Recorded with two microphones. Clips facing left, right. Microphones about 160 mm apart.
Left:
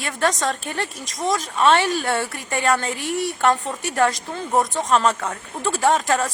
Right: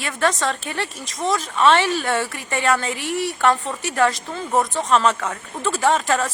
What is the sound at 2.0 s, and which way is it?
Speech, 10° left (ahead or behind).